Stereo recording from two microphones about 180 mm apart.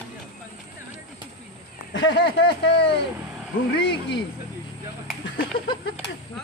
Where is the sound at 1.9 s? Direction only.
75° left (ahead or behind).